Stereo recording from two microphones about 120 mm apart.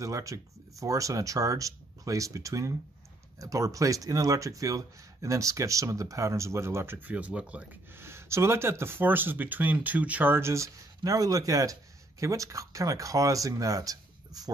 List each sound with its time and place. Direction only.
0.0 s speech: 25° right (ahead or behind)